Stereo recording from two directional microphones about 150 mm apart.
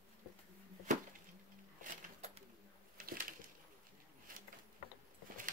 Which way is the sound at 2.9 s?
70° right (ahead or behind).